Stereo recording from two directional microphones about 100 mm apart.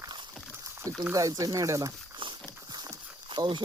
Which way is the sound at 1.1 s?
35° right (ahead or behind).